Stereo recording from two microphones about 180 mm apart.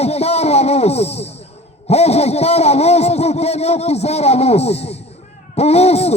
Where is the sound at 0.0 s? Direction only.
35° left (ahead or behind).